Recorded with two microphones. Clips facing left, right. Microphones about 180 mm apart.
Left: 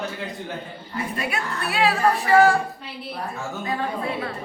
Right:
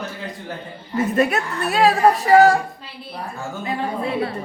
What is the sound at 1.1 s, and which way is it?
Speech, 45° right (ahead or behind).